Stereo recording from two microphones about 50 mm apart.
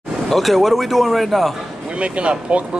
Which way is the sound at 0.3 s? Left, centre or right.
Centre.